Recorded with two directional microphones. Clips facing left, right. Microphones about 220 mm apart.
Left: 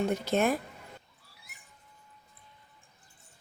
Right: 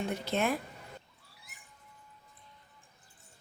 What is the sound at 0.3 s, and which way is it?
Speech, 45° left (ahead or behind).